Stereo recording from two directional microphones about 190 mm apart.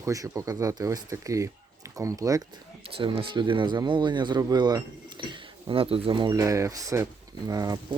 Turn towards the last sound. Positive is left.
turn(degrees=-20)  # may be behind; listen again after turning